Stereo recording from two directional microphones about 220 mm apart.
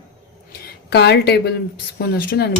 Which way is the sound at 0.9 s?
50° left (ahead or behind).